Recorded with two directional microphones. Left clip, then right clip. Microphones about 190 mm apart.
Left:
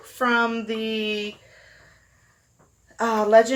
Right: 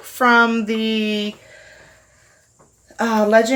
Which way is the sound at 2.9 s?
40° right (ahead or behind).